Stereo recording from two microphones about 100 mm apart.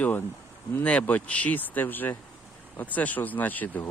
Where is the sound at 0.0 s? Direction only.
20° left (ahead or behind).